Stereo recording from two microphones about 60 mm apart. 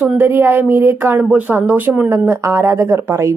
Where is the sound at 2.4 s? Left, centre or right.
Right.